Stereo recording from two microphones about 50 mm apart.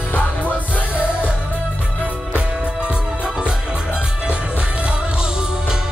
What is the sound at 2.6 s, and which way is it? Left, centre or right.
Music, centre.